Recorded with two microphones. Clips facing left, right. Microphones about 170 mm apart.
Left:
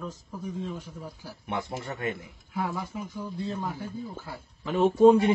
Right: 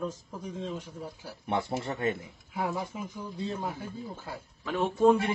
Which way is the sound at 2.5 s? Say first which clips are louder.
Left 1 dB; 20° right (ahead or behind).